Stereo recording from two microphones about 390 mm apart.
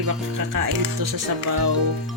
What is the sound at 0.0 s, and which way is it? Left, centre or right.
Speech, right.